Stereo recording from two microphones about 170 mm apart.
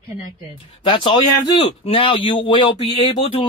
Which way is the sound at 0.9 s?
25° left (ahead or behind).